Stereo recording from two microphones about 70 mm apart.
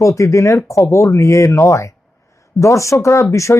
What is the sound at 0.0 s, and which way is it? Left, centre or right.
Speech, left.